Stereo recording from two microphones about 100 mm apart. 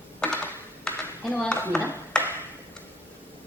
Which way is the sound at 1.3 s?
10° left (ahead or behind).